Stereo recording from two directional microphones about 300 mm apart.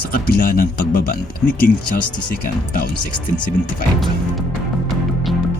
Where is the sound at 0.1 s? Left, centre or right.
Left.